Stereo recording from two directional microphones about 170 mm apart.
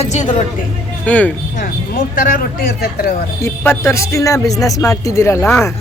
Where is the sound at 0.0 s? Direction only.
45° left (ahead or behind).